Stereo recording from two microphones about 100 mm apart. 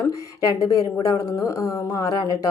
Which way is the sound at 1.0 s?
30° left (ahead or behind).